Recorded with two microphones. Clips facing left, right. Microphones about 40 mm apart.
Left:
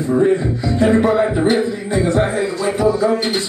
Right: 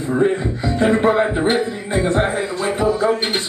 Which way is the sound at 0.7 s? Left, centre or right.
Right.